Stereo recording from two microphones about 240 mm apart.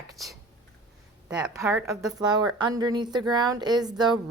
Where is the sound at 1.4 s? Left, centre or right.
Centre.